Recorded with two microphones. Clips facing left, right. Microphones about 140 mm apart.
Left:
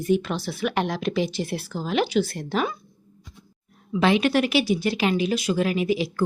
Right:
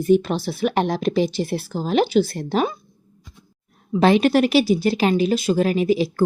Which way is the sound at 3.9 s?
40° right (ahead or behind).